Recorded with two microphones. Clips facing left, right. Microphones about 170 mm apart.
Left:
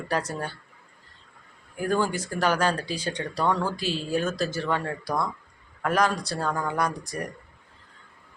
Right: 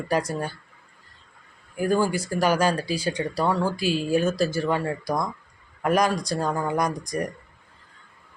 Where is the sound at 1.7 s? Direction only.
10° right (ahead or behind).